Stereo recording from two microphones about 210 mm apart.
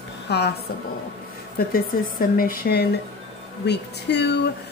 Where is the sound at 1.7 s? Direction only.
40° left (ahead or behind).